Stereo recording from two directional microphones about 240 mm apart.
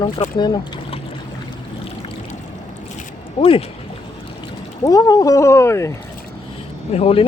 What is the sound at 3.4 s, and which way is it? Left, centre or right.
Speech, left.